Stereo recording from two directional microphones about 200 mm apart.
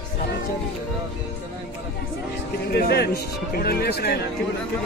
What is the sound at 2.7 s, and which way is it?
Speech, 55° left (ahead or behind).